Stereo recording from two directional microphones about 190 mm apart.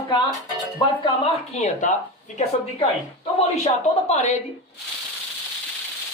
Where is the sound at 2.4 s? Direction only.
30° left (ahead or behind).